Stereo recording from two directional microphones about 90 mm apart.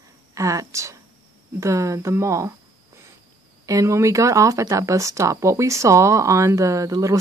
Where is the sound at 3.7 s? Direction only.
35° right (ahead or behind).